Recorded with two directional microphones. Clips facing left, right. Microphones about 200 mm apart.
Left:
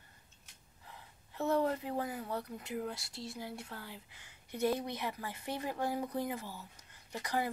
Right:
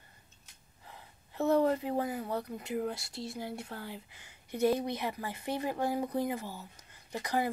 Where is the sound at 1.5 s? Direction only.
20° right (ahead or behind).